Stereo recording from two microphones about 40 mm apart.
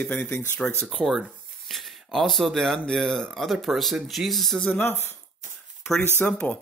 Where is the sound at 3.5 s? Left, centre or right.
Centre.